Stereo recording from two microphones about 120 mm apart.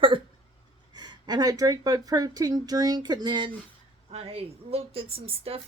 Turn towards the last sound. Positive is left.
turn(degrees=-55)  # may be behind; listen again after turning